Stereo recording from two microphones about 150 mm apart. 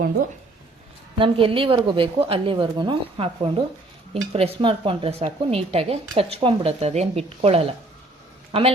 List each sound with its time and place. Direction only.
1.2 s speech: 35° right (ahead or behind)